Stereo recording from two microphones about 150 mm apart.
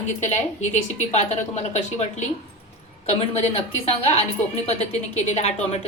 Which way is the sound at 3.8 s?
40° left (ahead or behind).